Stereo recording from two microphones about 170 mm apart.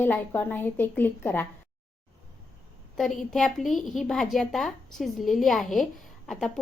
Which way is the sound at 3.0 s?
Centre (ahead or behind).